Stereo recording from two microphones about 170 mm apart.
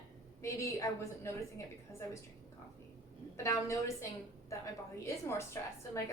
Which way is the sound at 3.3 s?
15° left (ahead or behind).